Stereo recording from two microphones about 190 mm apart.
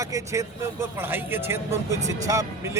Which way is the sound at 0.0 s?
15° right (ahead or behind).